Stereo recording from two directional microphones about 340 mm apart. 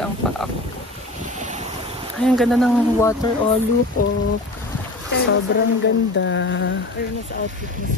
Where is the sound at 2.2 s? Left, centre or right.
Centre.